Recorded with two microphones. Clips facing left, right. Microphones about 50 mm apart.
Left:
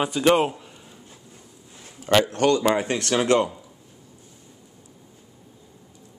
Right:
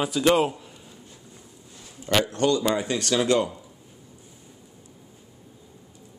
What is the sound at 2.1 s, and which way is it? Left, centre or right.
Speech, left.